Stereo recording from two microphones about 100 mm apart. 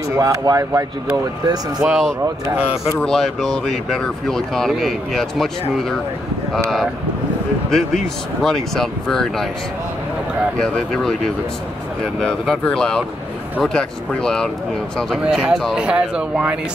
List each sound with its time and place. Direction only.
0.1 s speech: 30° right (ahead or behind)
1.8 s speech: 5° right (ahead or behind)
3.1 s speech: 5° left (ahead or behind)
7.7 s speech: 5° left (ahead or behind)
10.6 s speech: 5° left (ahead or behind)
15.2 s speech: 5° right (ahead or behind)